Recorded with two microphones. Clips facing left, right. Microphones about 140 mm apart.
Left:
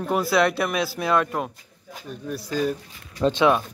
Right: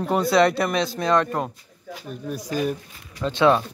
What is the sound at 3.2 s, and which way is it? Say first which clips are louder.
Speech: even; 20° left (ahead or behind).